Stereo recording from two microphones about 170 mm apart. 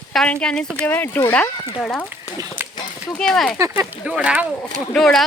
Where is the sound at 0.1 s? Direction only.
5° left (ahead or behind).